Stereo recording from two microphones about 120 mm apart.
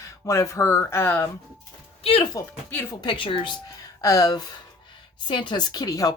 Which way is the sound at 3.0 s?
45° left (ahead or behind).